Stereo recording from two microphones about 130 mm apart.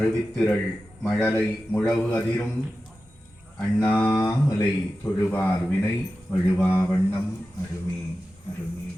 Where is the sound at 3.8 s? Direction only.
15° left (ahead or behind).